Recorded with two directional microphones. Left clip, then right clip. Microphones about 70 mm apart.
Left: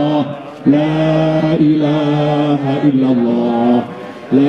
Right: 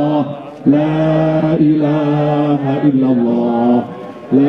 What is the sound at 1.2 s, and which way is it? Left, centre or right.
Music, left.